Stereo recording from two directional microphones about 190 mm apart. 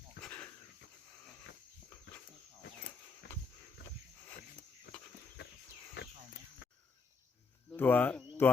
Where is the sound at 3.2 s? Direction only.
65° left (ahead or behind).